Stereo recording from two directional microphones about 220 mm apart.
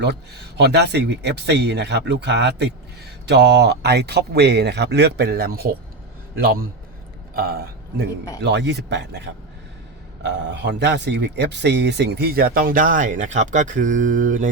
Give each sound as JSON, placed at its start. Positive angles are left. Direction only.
{"t": 0.0, "sound": "speech", "side_deg": -50}
{"t": 8.4, "sound": "speech", "side_deg": -50}